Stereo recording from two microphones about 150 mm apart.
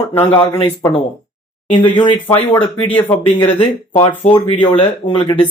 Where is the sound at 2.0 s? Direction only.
15° left (ahead or behind).